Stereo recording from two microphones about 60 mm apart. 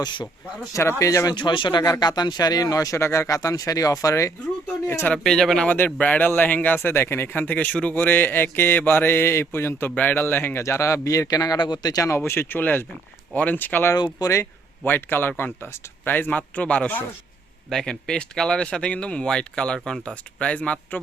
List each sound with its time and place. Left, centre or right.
0.8 s speech: left
1.0 s a man's voice: left
1.8 s speech: left
3.0 s speech: left
5.1 s speech: centre
5.6 s a man's voice: left
9.9 s a man's voice: left
10.6 s a man's voice: left
12.1 s a man's voice: left
13.9 s speech: left
14.8 s a man's voice: left
17.7 s speech: centre